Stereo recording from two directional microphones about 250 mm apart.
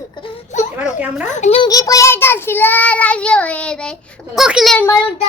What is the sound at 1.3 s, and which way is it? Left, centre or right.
Child singing, left.